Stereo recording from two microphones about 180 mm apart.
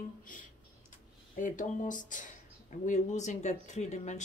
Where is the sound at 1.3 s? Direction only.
45° left (ahead or behind).